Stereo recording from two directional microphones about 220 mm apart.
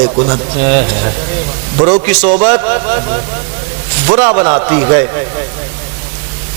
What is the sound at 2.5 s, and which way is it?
Speech, 20° right (ahead or behind).